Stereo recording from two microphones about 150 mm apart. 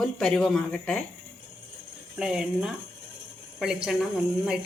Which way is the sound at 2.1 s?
5° right (ahead or behind).